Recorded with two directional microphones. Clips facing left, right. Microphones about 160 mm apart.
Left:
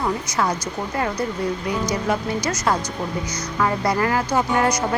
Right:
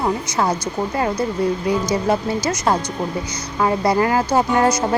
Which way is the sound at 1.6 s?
30° right (ahead or behind).